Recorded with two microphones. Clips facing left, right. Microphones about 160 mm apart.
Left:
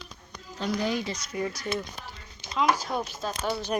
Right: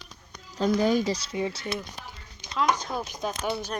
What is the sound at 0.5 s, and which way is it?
Speech, 45° right (ahead or behind).